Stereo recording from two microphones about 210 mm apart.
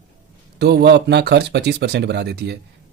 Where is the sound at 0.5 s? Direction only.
50° right (ahead or behind).